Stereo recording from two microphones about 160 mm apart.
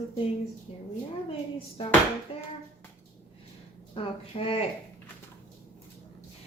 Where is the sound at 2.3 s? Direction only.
35° left (ahead or behind).